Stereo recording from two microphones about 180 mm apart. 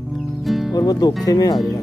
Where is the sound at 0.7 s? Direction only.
20° left (ahead or behind).